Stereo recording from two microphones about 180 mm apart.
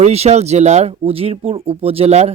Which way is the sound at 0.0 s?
35° right (ahead or behind).